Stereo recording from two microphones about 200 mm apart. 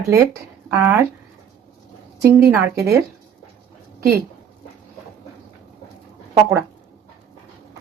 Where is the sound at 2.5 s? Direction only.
15° right (ahead or behind).